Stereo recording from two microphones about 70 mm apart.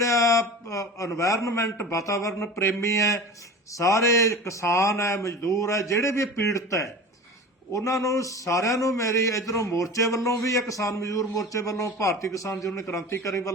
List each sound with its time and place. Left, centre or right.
0.0 s a man's voice: left